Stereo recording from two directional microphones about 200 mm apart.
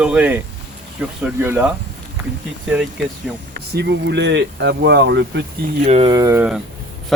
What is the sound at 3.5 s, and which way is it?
Speech, 55° right (ahead or behind).